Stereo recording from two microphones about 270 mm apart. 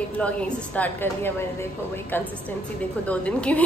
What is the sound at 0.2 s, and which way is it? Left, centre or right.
A woman's voice, centre.